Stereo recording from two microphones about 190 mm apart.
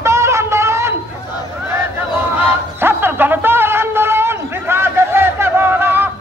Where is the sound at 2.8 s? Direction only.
10° right (ahead or behind).